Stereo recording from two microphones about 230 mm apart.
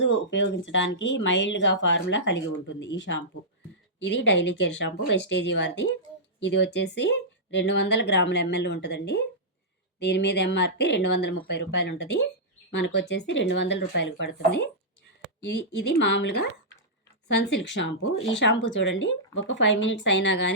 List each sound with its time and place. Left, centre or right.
0.0 s speech: left